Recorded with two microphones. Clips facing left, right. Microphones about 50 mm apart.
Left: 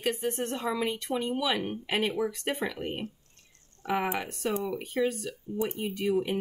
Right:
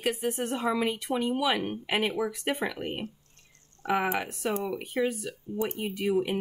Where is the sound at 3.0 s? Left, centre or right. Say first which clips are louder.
Even; right.